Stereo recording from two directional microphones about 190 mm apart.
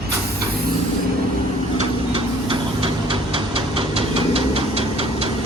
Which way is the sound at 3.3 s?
25° right (ahead or behind).